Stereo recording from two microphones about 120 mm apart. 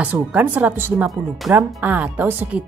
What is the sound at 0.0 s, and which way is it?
Speech, 10° right (ahead or behind).